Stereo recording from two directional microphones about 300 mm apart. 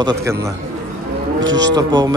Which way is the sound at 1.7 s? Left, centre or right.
Centre.